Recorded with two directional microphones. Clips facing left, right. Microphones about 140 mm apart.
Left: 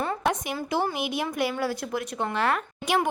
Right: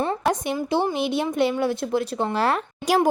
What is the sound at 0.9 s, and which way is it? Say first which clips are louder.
Speech: right 6 dB; 30° right (ahead or behind).